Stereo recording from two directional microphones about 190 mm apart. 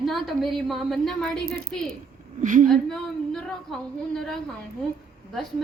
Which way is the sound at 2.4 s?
45° right (ahead or behind).